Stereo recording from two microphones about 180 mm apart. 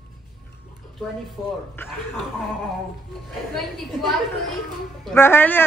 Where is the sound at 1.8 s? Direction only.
10° left (ahead or behind).